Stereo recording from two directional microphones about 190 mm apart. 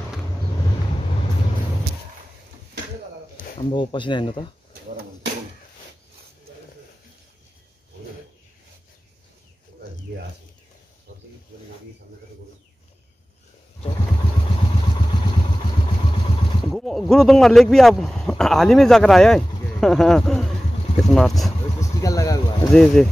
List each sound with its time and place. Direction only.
3.7 s speech: 25° left (ahead or behind)
16.7 s speech: centre (ahead or behind)
21.7 s vehicle: 15° left (ahead or behind)
22.7 s speech: 5° left (ahead or behind)